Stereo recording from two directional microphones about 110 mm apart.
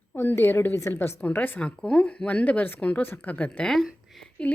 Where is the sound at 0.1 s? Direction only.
20° left (ahead or behind).